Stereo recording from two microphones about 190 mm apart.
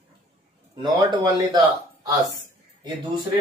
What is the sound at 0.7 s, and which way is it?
Speech, 20° right (ahead or behind).